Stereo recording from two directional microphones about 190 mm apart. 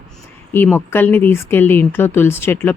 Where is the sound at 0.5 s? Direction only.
10° left (ahead or behind).